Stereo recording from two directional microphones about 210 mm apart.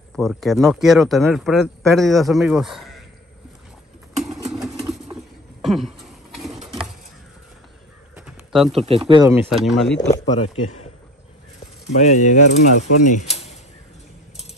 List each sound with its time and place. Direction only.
0.1 s speech: centre (ahead or behind)
5.6 s a sound: centre (ahead or behind)
8.3 s a sound: centre (ahead or behind)
8.7 s speech: 30° right (ahead or behind)
9.3 s speech: 5° right (ahead or behind)
10.0 s speech: 30° left (ahead or behind)
12.0 s speech: 35° left (ahead or behind)
12.4 s speech: 90° left
13.0 s speech: 35° left (ahead or behind)